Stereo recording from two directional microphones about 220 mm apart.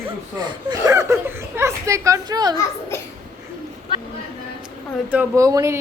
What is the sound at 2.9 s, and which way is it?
Speech, 10° left (ahead or behind).